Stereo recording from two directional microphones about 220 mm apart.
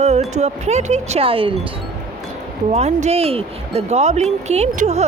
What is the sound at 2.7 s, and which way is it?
Speech, 30° right (ahead or behind).